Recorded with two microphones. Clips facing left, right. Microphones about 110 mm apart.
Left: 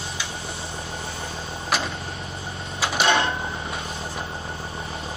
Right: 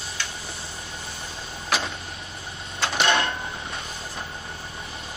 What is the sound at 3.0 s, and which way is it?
Vehicle, 30° left (ahead or behind).